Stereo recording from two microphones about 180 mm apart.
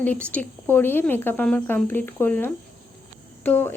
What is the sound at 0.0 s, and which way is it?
Speech, 10° left (ahead or behind).